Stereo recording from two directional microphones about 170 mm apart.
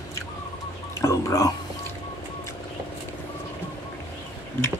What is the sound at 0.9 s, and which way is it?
Whispering, 15° left (ahead or behind).